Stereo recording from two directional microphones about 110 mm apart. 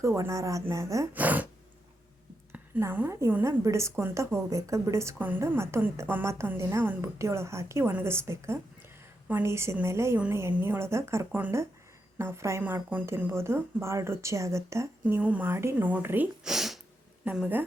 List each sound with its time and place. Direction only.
0.0 s a woman's voice: 30° right (ahead or behind)
1.1 s a woman's voice: 15° right (ahead or behind)
2.5 s a woman's voice: 15° right (ahead or behind)
15.0 s a woman's voice: 15° right (ahead or behind)
16.4 s a sound: 5° right (ahead or behind)
17.2 s a woman's voice: 15° right (ahead or behind)